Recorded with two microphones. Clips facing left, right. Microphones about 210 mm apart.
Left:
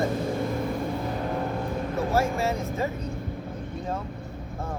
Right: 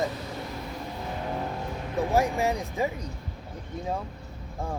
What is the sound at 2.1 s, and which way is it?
Speech, 15° right (ahead or behind).